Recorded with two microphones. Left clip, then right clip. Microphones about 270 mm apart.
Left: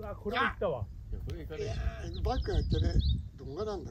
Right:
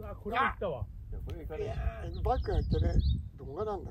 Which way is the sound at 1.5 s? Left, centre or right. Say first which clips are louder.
Right 1 dB; centre.